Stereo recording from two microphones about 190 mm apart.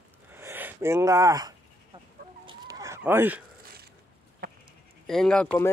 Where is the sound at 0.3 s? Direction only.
10° right (ahead or behind).